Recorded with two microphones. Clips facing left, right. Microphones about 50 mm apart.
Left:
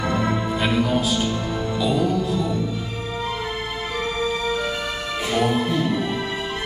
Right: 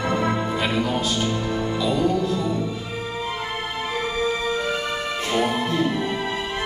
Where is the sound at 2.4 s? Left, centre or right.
Centre.